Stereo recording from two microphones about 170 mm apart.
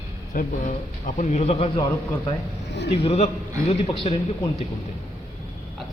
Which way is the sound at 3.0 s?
40° left (ahead or behind).